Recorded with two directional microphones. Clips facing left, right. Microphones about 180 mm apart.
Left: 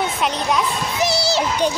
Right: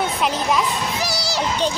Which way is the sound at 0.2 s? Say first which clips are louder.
Even; centre (ahead or behind).